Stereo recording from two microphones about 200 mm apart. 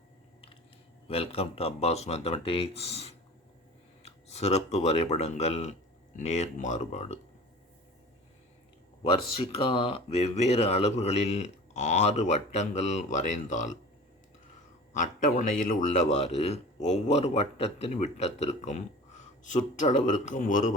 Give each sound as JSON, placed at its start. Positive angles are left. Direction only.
{"t": 1.0, "sound": "a man's voice", "side_deg": 30}
{"t": 9.3, "sound": "a man's voice", "side_deg": 25}
{"t": 14.9, "sound": "a man's voice", "side_deg": 40}